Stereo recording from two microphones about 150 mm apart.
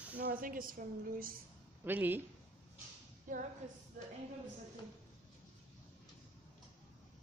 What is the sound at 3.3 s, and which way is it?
Speech, 60° right (ahead or behind).